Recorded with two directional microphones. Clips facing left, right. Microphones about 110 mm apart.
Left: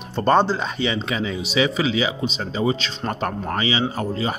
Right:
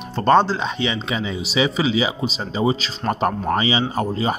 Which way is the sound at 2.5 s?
20° right (ahead or behind).